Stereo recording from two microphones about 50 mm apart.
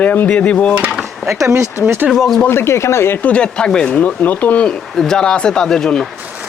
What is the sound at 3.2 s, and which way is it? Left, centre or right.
Cutlery, left.